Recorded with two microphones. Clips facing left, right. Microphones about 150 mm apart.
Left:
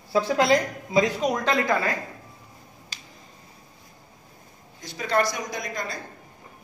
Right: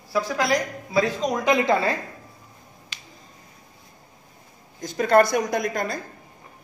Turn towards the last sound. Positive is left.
turn(degrees=-55)  # may be behind; listen again after turning